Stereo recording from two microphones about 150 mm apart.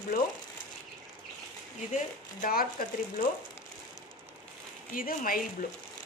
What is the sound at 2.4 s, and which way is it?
Speech, 70° left (ahead or behind).